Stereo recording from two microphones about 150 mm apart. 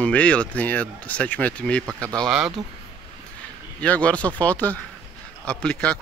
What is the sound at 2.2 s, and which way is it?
Speech, 5° right (ahead or behind).